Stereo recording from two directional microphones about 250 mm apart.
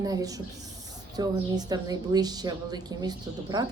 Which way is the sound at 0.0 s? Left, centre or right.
Centre.